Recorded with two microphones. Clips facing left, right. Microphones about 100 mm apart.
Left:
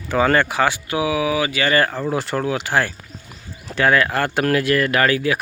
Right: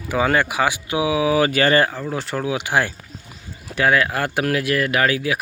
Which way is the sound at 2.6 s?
15° right (ahead or behind).